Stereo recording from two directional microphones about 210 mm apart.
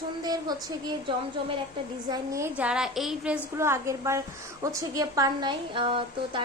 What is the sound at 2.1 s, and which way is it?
A woman's voice, 15° right (ahead or behind).